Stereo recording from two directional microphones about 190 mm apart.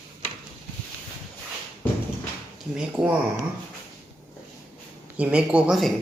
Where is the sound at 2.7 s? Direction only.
5° right (ahead or behind).